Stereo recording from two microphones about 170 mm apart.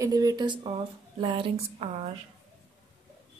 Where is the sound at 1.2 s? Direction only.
35° right (ahead or behind).